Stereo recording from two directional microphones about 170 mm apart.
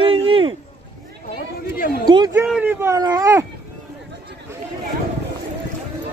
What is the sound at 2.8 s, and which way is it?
Speech, 20° right (ahead or behind).